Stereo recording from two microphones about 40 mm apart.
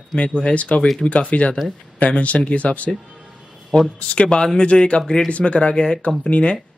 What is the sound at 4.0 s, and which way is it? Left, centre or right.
Speech, left.